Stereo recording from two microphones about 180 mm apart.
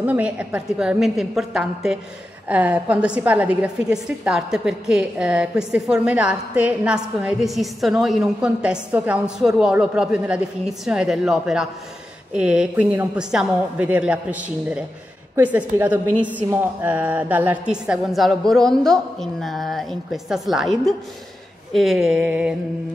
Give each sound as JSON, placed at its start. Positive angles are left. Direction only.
{"t": 0.0, "sound": "a woman's voice", "side_deg": -10}